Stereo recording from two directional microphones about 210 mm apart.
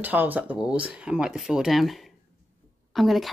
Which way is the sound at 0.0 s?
10° right (ahead or behind).